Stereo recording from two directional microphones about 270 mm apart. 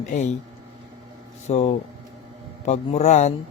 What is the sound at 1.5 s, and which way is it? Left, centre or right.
Speech, left.